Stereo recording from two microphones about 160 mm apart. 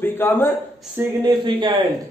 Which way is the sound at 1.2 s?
30° right (ahead or behind).